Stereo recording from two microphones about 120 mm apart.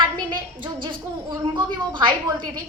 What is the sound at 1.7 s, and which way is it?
Speech, 40° right (ahead or behind).